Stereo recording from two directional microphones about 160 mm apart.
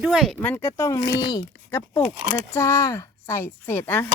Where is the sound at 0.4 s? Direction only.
15° left (ahead or behind).